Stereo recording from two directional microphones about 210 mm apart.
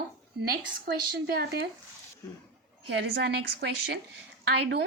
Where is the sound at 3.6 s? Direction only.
50° right (ahead or behind).